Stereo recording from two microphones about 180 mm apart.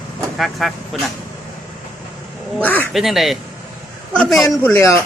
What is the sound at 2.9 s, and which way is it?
Speech, centre (ahead or behind).